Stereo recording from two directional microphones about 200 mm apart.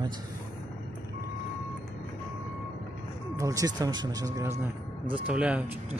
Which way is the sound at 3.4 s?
15° right (ahead or behind).